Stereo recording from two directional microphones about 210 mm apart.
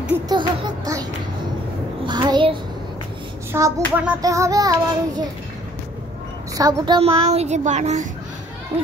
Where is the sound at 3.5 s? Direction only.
10° right (ahead or behind).